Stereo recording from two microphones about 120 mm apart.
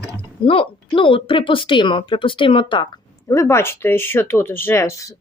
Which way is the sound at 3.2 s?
25° left (ahead or behind).